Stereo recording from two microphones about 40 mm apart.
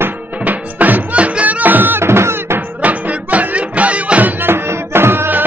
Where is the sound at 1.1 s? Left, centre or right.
Right.